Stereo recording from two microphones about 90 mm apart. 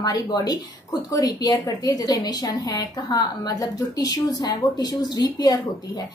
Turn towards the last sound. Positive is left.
turn(degrees=45)  # may be behind; listen again after turning